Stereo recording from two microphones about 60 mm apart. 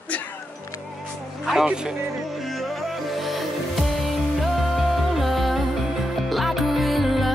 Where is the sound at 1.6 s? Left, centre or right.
Centre.